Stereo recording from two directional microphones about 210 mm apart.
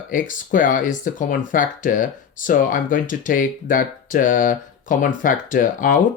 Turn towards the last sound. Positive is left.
turn(degrees=40)  # may be behind; listen again after turning